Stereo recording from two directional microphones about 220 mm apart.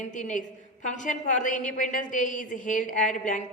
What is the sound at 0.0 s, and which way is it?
A woman's voice, 35° left (ahead or behind).